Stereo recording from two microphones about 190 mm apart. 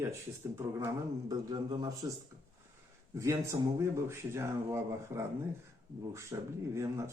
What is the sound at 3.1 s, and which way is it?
Speech, 15° right (ahead or behind).